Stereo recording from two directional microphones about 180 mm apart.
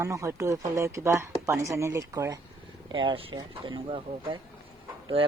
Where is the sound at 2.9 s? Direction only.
30° right (ahead or behind).